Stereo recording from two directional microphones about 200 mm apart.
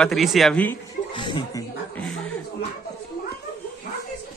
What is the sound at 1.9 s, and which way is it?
Chuckle, 5° left (ahead or behind).